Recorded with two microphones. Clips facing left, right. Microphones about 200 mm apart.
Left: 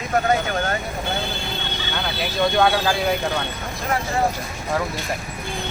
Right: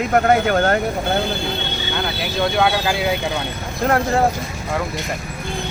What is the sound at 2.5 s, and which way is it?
Speech, 5° right (ahead or behind).